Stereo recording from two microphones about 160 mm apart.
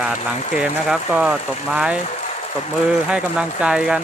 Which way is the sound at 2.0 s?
45° left (ahead or behind).